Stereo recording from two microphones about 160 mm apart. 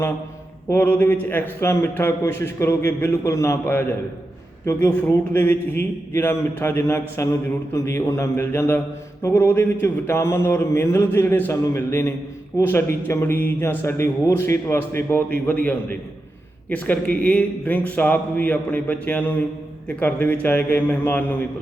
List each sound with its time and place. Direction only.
0.7 s mantra: 15° left (ahead or behind)